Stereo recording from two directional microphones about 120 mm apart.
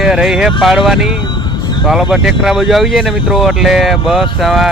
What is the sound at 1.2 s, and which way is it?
Vehicle, 35° left (ahead or behind).